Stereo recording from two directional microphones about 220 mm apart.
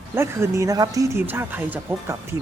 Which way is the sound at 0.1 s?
10° right (ahead or behind).